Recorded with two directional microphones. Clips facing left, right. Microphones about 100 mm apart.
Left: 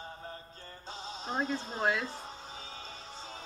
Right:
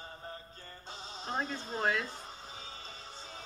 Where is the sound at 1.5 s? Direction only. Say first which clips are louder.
Left 2 dB; 5° left (ahead or behind).